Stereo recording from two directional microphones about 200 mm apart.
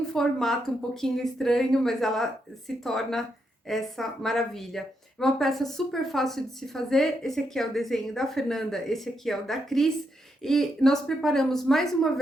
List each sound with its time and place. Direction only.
0.1 s speech: centre (ahead or behind)